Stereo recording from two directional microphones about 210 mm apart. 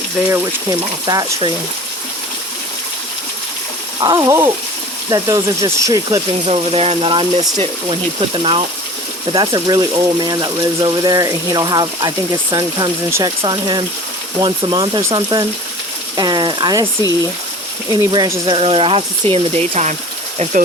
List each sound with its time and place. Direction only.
0.3 s speech: 15° right (ahead or behind)
4.0 s speech: 15° right (ahead or behind); by 20.0 s 35° right (ahead or behind)